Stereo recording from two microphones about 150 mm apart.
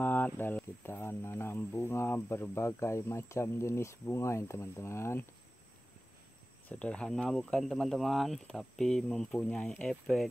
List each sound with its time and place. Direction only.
0.0 s speech: 10° left (ahead or behind)
6.7 s speech: 10° left (ahead or behind)